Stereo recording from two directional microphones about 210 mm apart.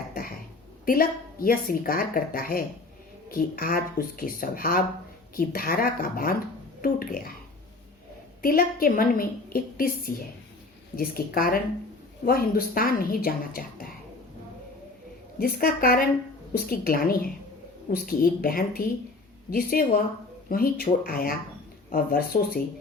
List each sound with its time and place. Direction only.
0.1 s throat clearing: 45° left (ahead or behind)
0.9 s a woman's voice: 45° left (ahead or behind)
8.4 s a woman's voice: 45° left (ahead or behind)
15.4 s a woman's voice: 45° left (ahead or behind)